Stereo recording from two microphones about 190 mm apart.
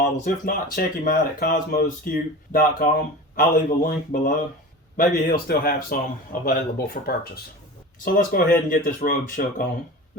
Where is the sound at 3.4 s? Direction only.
45° left (ahead or behind).